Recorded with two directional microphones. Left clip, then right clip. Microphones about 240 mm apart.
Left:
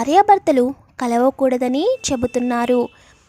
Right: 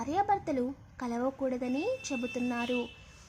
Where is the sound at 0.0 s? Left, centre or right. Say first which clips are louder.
Left 17 dB; left.